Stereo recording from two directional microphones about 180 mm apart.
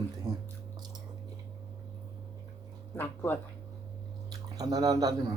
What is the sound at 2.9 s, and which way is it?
Speech, 10° left (ahead or behind).